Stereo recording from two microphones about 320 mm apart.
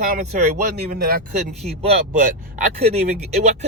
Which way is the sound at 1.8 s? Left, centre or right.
Right.